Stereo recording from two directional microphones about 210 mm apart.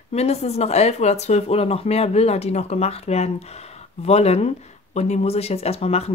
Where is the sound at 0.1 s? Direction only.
30° left (ahead or behind).